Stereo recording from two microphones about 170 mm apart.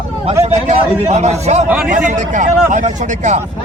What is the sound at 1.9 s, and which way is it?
A man's voice, 45° right (ahead or behind).